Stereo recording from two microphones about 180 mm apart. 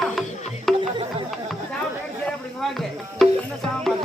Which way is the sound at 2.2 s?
Centre (ahead or behind).